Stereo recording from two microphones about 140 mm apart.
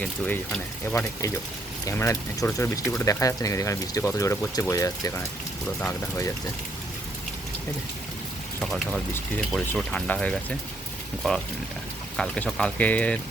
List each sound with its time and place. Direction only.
0.0 s speech: 5° left (ahead or behind)
1.9 s speech: 20° left (ahead or behind)
8.6 s speech: centre (ahead or behind)